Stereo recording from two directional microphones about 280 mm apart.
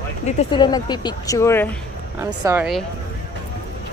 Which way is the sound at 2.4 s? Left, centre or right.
Centre.